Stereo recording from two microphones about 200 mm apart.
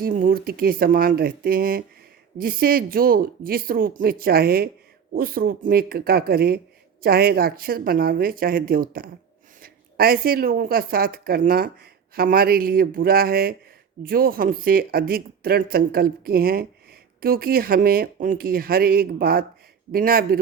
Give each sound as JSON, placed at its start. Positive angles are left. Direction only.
{"t": 0.0, "sound": "a woman's voice", "side_deg": -45}